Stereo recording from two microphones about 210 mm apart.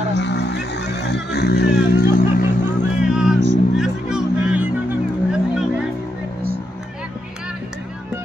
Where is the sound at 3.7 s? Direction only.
5° right (ahead or behind).